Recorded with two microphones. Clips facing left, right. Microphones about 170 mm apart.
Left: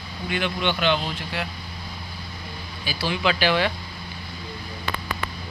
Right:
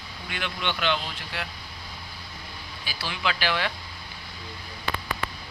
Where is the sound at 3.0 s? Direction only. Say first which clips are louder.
Left 6 dB; 30° left (ahead or behind).